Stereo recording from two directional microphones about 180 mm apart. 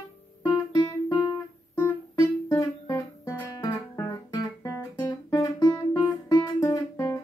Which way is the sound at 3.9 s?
20° left (ahead or behind).